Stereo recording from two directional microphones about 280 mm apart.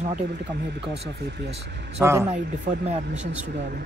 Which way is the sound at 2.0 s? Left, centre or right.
Centre.